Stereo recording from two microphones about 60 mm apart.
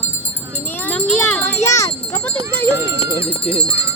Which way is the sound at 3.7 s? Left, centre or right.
Right.